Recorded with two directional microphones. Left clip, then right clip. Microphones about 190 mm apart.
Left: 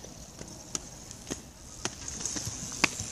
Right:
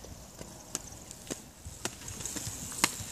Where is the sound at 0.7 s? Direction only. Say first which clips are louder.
Left 3 dB; 50° right (ahead or behind).